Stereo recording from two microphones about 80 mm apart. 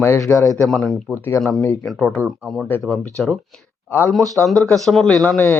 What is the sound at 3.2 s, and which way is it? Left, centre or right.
Speech, centre.